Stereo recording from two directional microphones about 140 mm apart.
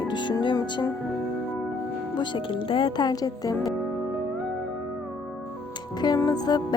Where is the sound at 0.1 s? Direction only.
35° left (ahead or behind).